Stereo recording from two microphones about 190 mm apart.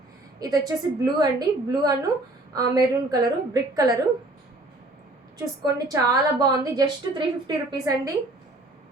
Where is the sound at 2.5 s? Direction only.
20° right (ahead or behind).